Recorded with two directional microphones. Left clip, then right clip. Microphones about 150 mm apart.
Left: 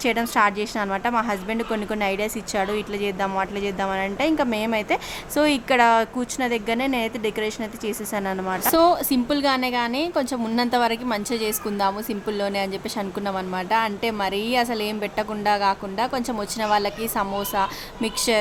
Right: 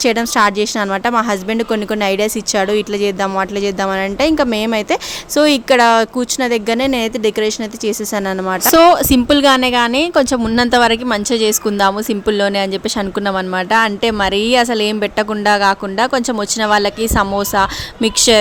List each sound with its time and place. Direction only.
0.0 s a woman's voice: 40° right (ahead or behind)
8.6 s a woman's voice: 55° right (ahead or behind)